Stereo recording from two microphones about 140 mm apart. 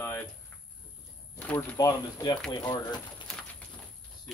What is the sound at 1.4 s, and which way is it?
Speech, 10° left (ahead or behind).